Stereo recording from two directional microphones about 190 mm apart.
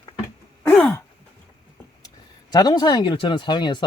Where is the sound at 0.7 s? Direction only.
5° left (ahead or behind).